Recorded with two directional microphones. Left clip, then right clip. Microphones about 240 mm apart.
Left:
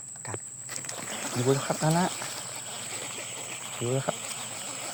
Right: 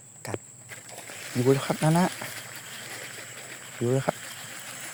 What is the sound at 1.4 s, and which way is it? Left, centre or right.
Speech, right.